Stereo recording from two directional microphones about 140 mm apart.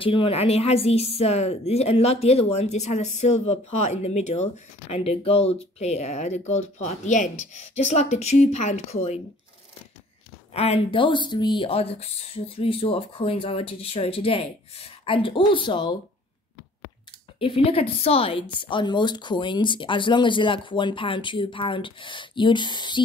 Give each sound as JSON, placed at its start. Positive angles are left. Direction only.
{"t": 0.0, "sound": "a woman's voice", "side_deg": 40}
{"t": 10.5, "sound": "a woman's voice", "side_deg": 45}
{"t": 17.4, "sound": "a woman's voice", "side_deg": 40}